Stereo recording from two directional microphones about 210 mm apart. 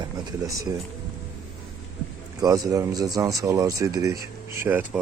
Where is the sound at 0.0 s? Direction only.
15° right (ahead or behind).